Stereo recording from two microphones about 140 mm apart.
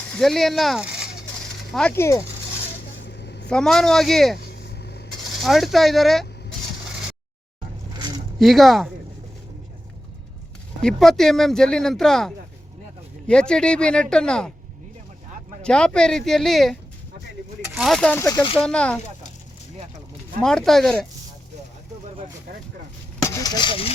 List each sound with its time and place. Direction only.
0.2 s speech: centre (ahead or behind)
1.9 s speech: 20° left (ahead or behind)
3.5 s speech: 5° left (ahead or behind)
5.4 s speech: centre (ahead or behind)
8.4 s speech: centre (ahead or behind)
10.8 s speech: centre (ahead or behind)
15.6 s speech: 5° left (ahead or behind)
17.7 s speech: centre (ahead or behind)
18.2 s speech: 20° left (ahead or behind)
18.6 s speech: 5° left (ahead or behind)
20.4 s speech: 5° left (ahead or behind)
23.2 s speech: 25° left (ahead or behind)